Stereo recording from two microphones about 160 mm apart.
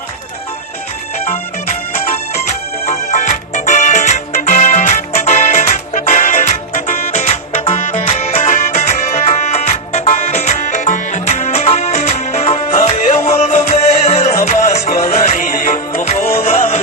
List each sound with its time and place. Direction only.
2.8 s music: 45° left (ahead or behind)